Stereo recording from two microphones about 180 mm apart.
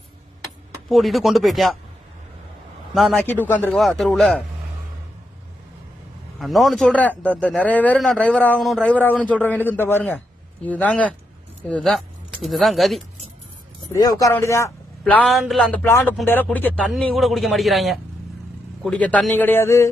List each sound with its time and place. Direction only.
0.4 s speech: centre (ahead or behind)
2.9 s a man's voice: centre (ahead or behind)
6.4 s a man's voice: centre (ahead or behind)
13.9 s a man's voice: 20° left (ahead or behind)
15.1 s a man's voice: 5° left (ahead or behind)